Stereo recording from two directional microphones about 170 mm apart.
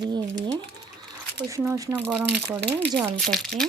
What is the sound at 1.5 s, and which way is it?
Speech, 20° right (ahead or behind).